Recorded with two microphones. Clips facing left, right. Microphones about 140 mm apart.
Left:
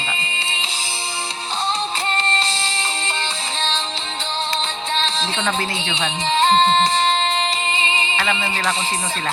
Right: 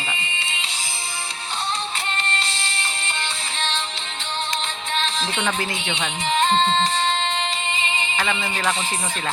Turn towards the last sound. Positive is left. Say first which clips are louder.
# left 4 dB
turn(degrees=30)  # may be behind; listen again after turning